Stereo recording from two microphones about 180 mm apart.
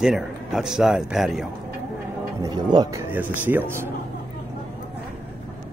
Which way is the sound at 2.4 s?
25° right (ahead or behind).